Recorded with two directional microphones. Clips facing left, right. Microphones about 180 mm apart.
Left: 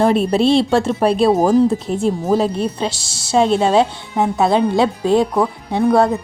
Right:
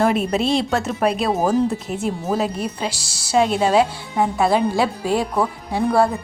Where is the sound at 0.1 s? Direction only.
30° left (ahead or behind).